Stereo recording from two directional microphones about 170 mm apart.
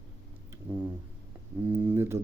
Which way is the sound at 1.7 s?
10° right (ahead or behind).